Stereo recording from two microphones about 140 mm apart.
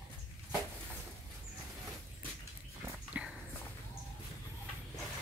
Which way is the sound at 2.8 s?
10° right (ahead or behind).